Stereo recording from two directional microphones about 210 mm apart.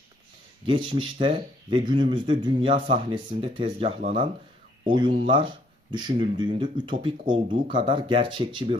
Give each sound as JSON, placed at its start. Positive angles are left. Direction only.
{"t": 0.7, "sound": "speech", "side_deg": -25}